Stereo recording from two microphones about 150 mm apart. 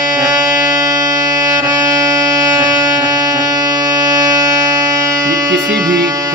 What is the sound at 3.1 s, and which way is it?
Music, 25° right (ahead or behind).